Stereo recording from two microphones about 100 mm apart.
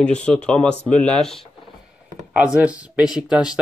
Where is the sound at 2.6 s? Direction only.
15° right (ahead or behind).